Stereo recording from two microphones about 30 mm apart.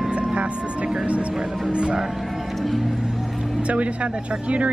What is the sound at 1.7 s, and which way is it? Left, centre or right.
Speech, right.